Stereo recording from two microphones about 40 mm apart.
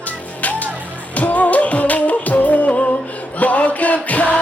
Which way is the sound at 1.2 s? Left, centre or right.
Left.